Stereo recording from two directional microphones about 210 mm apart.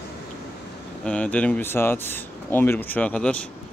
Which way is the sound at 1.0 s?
5° left (ahead or behind).